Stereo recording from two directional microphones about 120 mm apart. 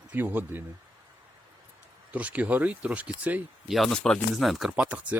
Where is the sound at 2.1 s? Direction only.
10° right (ahead or behind).